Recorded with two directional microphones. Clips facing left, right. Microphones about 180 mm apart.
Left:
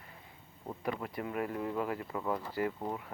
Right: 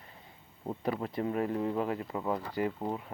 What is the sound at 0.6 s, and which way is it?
Speech, 25° right (ahead or behind).